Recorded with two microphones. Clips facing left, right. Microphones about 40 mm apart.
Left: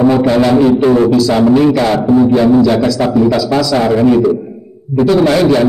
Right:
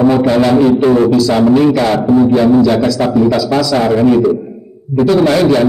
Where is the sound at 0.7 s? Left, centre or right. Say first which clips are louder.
Even; centre.